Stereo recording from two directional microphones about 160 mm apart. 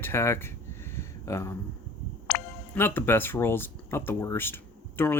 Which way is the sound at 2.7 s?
15° left (ahead or behind).